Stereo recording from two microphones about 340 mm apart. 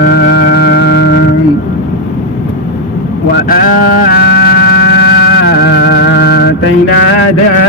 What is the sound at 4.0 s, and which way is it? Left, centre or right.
Music, left.